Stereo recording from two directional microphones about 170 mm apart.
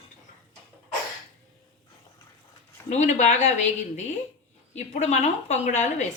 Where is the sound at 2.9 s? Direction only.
45° left (ahead or behind).